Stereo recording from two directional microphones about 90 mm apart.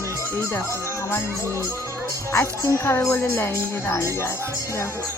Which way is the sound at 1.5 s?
35° right (ahead or behind).